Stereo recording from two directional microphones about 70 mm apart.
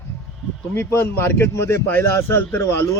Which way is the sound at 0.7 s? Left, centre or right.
Left.